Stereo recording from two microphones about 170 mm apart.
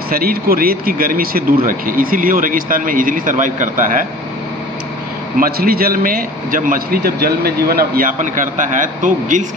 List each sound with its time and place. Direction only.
0.1 s a man's voice: 60° right (ahead or behind)
5.4 s a man's voice: 60° right (ahead or behind)